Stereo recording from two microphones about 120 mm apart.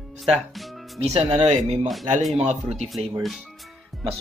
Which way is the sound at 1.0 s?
55° right (ahead or behind).